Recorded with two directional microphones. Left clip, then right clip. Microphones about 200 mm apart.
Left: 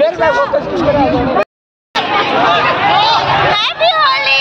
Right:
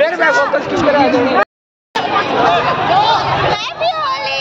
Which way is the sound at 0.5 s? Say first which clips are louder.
Left 1 dB; 30° right (ahead or behind).